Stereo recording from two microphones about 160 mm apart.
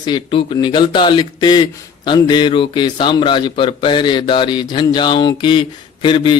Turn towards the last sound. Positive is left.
turn(degrees=30)  # may be behind; listen again after turning